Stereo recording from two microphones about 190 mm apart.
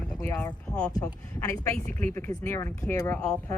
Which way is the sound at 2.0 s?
15° left (ahead or behind).